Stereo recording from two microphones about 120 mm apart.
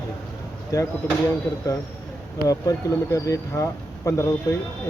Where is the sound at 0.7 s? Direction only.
30° left (ahead or behind).